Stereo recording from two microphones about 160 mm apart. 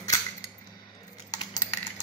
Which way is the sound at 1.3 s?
25° left (ahead or behind).